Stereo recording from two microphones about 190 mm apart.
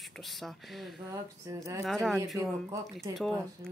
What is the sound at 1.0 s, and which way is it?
Speech, 15° right (ahead or behind).